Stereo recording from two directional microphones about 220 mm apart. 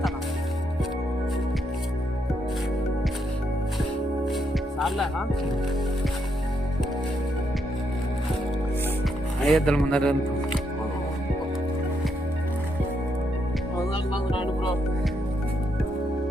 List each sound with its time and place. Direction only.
9.5 s speech: 5° left (ahead or behind)
13.9 s music: 20° left (ahead or behind)